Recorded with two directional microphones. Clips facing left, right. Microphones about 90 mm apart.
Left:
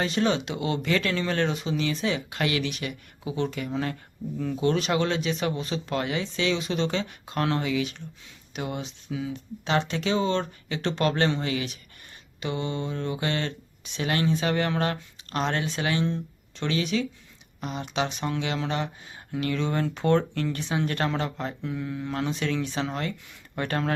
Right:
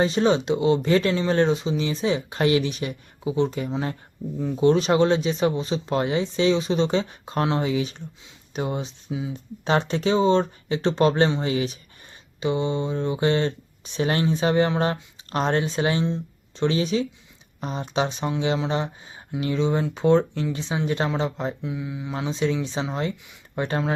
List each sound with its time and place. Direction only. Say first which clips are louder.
0.0 s speech: right 5 dB; 25° right (ahead or behind); by 22.3 s 10° right (ahead or behind)
22.3 s speech: right 3 dB; 20° right (ahead or behind)